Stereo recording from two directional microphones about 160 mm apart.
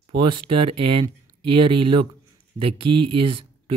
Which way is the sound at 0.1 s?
90° right.